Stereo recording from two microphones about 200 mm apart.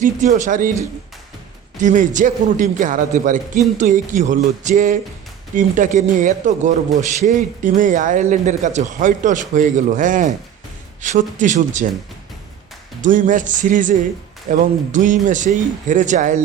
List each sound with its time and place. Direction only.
0.0 s a man's voice: 40° right (ahead or behind)
1.8 s a man's voice: 40° right (ahead or behind)
13.1 s a man's voice: 40° right (ahead or behind)